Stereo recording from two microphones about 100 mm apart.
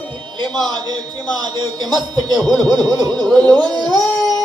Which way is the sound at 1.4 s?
45° right (ahead or behind).